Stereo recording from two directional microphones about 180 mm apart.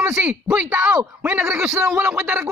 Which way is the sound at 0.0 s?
5° right (ahead or behind).